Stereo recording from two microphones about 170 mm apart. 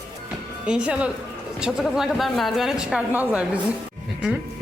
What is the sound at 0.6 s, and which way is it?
Speech, 5° right (ahead or behind).